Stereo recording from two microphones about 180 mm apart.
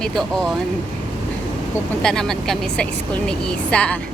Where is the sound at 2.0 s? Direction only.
5° left (ahead or behind).